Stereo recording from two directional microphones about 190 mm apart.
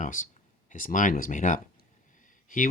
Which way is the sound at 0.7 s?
45° left (ahead or behind).